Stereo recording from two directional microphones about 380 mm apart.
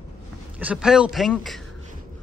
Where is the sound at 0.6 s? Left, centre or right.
Centre.